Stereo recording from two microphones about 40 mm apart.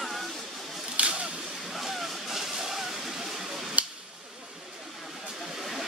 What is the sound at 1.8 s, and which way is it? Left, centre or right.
Vehicle, centre.